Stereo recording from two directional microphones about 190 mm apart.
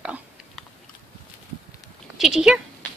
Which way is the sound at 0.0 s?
5° right (ahead or behind).